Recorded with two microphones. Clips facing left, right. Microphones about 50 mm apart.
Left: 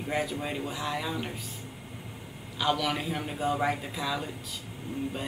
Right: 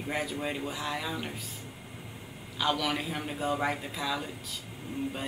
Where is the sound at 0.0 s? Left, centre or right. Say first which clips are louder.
Left 2 dB; centre.